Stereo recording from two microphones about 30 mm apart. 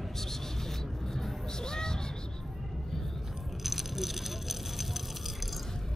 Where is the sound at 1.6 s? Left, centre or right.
Left.